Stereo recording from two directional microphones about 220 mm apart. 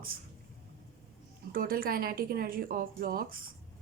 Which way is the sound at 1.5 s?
40° right (ahead or behind).